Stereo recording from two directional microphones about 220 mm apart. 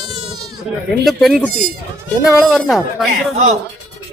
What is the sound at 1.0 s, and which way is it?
Speech, centre (ahead or behind).